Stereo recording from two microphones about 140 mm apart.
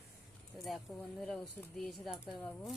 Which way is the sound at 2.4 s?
10° left (ahead or behind).